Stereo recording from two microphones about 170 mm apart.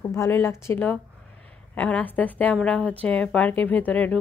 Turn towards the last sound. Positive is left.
turn(degrees=10)  # may be behind; listen again after turning